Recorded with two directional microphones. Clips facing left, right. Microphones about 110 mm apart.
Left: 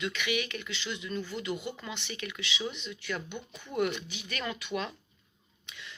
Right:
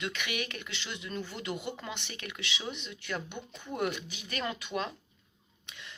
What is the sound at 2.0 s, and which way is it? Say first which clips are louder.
Speech: left 3 dB; 50° right (ahead or behind).